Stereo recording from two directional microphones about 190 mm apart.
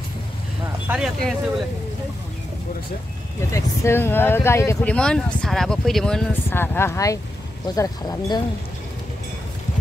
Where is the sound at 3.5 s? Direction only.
15° left (ahead or behind).